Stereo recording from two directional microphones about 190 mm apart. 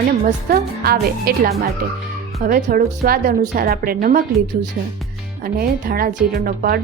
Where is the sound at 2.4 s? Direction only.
50° right (ahead or behind).